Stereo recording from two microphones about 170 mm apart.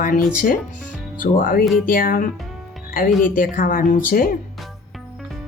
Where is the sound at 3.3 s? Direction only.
55° left (ahead or behind).